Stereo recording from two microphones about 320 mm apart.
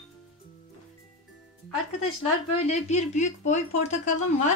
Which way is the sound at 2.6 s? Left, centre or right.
Left.